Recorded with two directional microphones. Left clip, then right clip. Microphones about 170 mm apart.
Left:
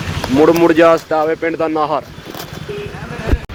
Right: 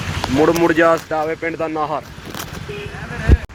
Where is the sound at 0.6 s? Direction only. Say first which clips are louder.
Left 4 dB; 10° right (ahead or behind); by 2.0 s 10° left (ahead or behind).